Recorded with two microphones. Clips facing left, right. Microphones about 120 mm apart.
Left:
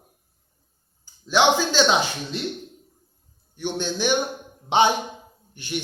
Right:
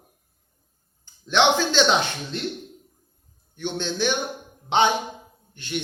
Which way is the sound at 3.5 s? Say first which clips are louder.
Even; 10° left (ahead or behind).